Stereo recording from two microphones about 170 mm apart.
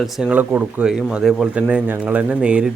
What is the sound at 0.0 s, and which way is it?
Speech, 5° right (ahead or behind).